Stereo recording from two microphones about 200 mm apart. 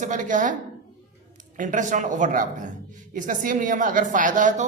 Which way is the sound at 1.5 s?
40° right (ahead or behind).